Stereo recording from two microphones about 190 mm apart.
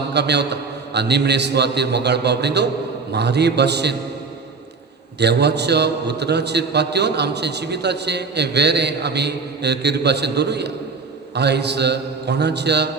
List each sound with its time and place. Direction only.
0.1 s a man's voice: 65° right (ahead or behind)
5.2 s a man's voice: 60° right (ahead or behind)